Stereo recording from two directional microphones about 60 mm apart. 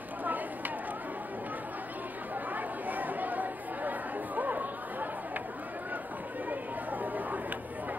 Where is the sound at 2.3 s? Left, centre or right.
Right.